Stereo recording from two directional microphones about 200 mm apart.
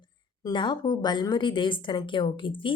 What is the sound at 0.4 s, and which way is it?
A woman's voice, 20° left (ahead or behind).